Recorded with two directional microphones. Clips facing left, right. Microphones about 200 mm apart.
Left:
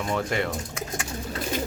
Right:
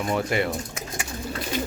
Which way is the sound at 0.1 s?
10° right (ahead or behind).